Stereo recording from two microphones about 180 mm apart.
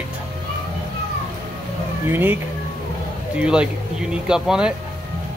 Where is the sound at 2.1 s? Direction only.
10° right (ahead or behind).